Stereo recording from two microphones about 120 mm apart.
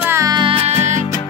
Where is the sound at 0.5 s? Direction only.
60° right (ahead or behind).